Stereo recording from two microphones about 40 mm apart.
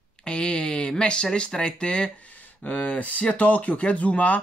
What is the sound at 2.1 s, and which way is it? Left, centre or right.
Speech, left.